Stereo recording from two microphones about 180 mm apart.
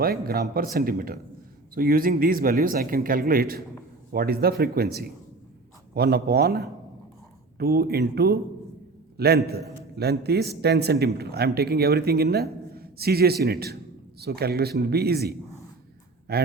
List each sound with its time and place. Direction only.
0.0 s a man's voice: 55° right (ahead or behind)